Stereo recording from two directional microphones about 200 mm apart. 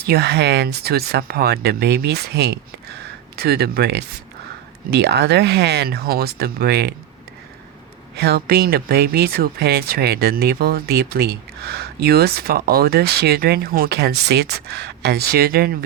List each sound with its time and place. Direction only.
0.0 s speech: 50° right (ahead or behind)
8.1 s speech: 55° right (ahead or behind)